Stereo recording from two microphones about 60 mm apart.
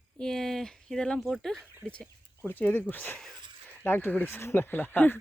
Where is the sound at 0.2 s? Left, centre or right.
Centre.